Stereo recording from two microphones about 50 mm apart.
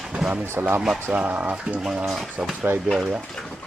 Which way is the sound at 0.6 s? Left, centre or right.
Right.